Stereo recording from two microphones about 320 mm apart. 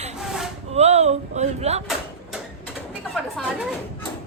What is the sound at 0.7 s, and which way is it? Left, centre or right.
Speech, centre.